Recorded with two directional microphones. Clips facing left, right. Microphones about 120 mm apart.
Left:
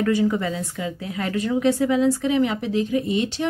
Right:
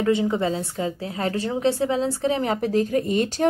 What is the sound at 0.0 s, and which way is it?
Speech, 25° right (ahead or behind).